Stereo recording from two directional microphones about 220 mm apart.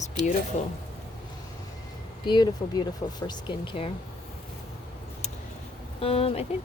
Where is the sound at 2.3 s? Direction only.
20° left (ahead or behind).